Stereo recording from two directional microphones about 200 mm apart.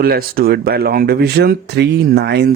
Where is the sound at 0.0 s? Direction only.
50° right (ahead or behind).